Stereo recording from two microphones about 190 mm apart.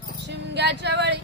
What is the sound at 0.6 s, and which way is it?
Speech, 65° right (ahead or behind).